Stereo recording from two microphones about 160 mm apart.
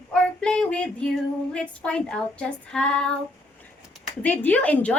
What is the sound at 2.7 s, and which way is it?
Female singing, 5° left (ahead or behind).